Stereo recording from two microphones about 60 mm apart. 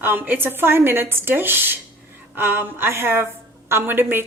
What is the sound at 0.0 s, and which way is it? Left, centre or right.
Speech, right.